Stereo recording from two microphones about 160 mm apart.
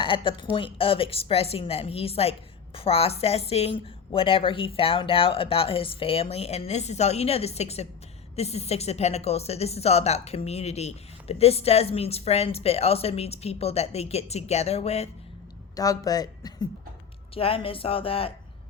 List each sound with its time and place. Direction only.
0.0 s a woman's voice: 35° left (ahead or behind)
15.7 s speech: 20° left (ahead or behind)
17.3 s a woman's voice: 35° left (ahead or behind)